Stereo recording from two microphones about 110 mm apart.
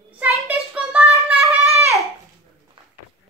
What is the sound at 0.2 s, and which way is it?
Child singing, 15° right (ahead or behind).